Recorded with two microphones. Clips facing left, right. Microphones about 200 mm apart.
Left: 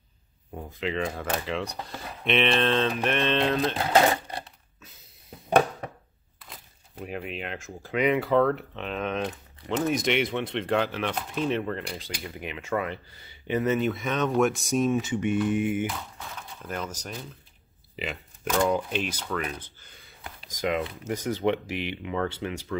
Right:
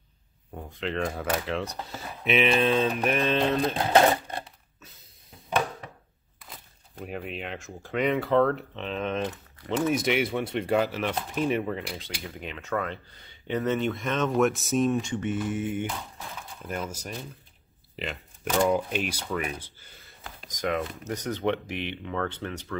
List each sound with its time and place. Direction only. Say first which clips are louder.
0.6 s speech: left 1 dB; 5° left (ahead or behind)
6.5 s speech: even; centre (ahead or behind)
12.2 s speech: left 1 dB; 10° left (ahead or behind)
16.6 s speech: right 1 dB; 5° right (ahead or behind)
17.9 s a sound: left 1 dB; centre (ahead or behind)
18.6 s speech: right 1 dB; 5° right (ahead or behind)
20.4 s speech: left 1 dB; 10° left (ahead or behind)